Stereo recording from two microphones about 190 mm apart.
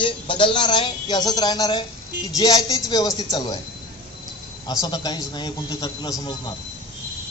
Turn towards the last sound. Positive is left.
turn(degrees=20)  # may be behind; listen again after turning